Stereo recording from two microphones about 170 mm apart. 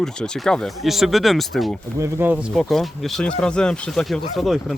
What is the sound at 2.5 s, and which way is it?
Speech, centre (ahead or behind).